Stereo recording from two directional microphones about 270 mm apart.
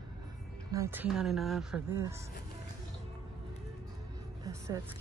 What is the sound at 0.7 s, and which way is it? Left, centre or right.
A woman's voice, centre.